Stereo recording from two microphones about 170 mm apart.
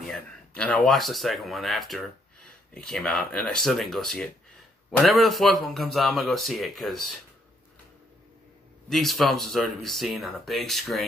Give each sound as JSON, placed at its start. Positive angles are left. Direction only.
{"t": 0.0, "sound": "speech", "side_deg": 5}
{"t": 8.8, "sound": "speech", "side_deg": 0}